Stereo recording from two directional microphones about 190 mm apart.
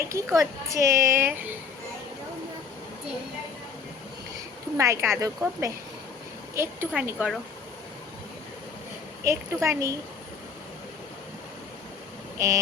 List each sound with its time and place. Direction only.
0.0 s a woman's voice: 15° right (ahead or behind)
4.8 s a woman's voice: 15° right (ahead or behind)
9.2 s a woman's voice: 15° right (ahead or behind)